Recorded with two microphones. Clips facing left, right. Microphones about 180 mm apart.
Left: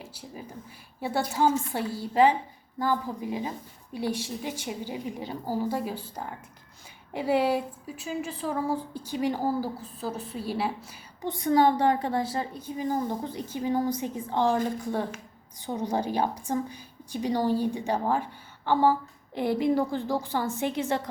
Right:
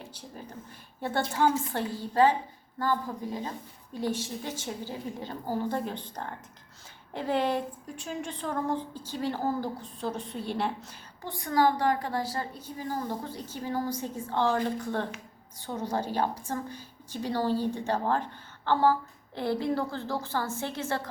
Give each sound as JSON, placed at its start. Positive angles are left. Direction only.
{"t": 0.0, "sound": "a woman's voice", "side_deg": 5}
{"t": 11.2, "sound": "a woman's voice", "side_deg": 20}